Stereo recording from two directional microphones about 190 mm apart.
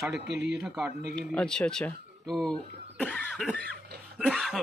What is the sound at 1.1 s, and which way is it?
Speech, 5° left (ahead or behind).